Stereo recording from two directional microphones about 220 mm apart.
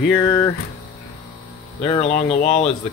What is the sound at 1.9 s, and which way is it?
Speech, 25° left (ahead or behind).